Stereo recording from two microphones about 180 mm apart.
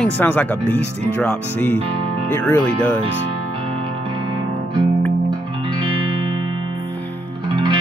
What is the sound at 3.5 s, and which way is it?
Music, 30° right (ahead or behind).